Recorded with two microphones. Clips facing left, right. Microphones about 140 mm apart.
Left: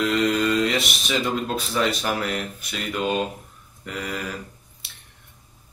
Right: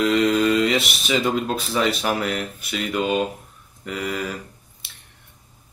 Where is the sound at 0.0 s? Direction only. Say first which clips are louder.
Right 3 dB; centre (ahead or behind).